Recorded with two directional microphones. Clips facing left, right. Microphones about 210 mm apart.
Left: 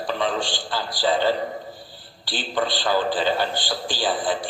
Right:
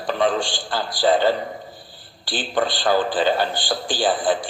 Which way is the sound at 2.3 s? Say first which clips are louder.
Right 2 dB; 50° right (ahead or behind).